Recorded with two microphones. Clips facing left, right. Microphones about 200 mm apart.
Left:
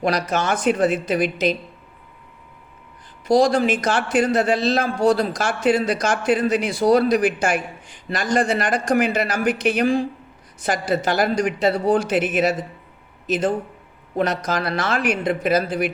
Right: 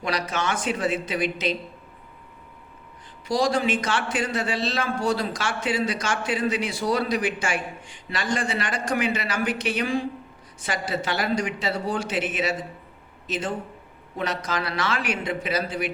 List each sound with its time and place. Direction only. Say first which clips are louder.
0.1 s speech: even; 40° left (ahead or behind)
0.5 s speech: left 8 dB; 60° left (ahead or behind)
0.8 s speech: left 6 dB; 45° left (ahead or behind)
3.3 s speech: left 6 dB; 45° left (ahead or behind)
12.1 s speech: left 7 dB; 50° left (ahead or behind)
14.2 s speech: left 6 dB; 40° left (ahead or behind)